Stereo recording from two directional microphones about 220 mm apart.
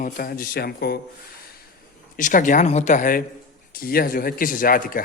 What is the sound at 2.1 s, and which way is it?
Speech, 35° left (ahead or behind).